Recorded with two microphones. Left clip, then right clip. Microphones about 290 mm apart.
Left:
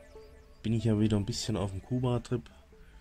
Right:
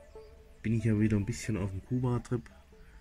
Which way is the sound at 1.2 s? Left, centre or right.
Centre.